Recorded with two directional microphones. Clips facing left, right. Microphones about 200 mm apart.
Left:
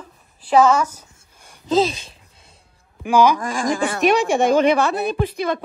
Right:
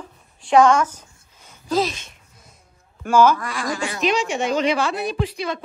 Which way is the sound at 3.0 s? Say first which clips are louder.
Even; 15° left (ahead or behind).